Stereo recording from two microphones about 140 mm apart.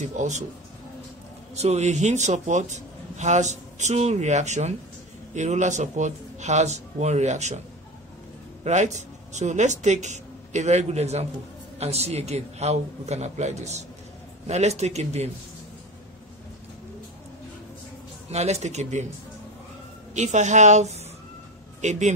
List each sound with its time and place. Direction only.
0.0 s a man's voice: 60° right (ahead or behind)
1.5 s a man's voice: 50° right (ahead or behind)
8.6 s a man's voice: 55° right (ahead or behind)
18.3 s a man's voice: 50° right (ahead or behind)
20.2 s a man's voice: 55° right (ahead or behind)